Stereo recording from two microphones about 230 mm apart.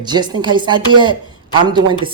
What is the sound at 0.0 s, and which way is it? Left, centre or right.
A woman's voice, centre.